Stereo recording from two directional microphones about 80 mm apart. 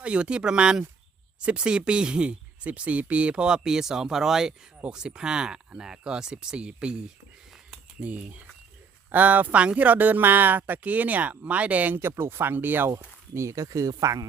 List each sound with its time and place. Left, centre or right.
0.0 s speech: centre
8.0 s speech: centre
13.3 s speech: right